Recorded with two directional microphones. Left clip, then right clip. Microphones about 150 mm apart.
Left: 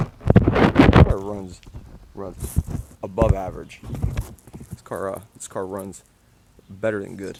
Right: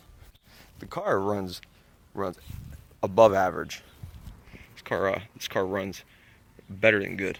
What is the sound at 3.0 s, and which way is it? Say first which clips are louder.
Speech: right 4 dB; 20° right (ahead or behind).